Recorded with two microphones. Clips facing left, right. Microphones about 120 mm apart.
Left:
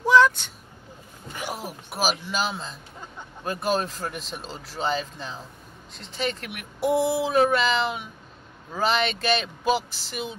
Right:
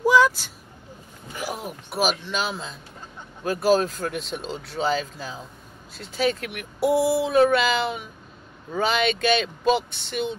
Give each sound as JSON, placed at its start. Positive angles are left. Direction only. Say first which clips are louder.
{"t": 0.0, "sound": "vehicle", "louder": "even", "side_deg": -10}
{"t": 1.4, "sound": "speech", "louder": "right 2 dB", "side_deg": 0}